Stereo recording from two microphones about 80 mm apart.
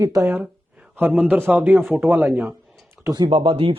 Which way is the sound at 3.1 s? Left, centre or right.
Right.